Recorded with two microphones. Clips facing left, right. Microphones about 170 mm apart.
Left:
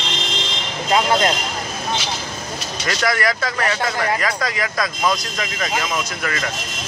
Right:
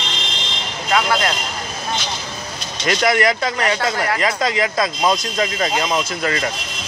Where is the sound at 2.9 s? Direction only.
20° right (ahead or behind).